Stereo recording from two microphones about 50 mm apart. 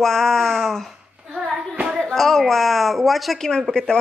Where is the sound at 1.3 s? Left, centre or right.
Centre.